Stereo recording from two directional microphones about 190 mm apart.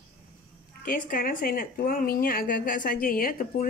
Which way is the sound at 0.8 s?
45° left (ahead or behind).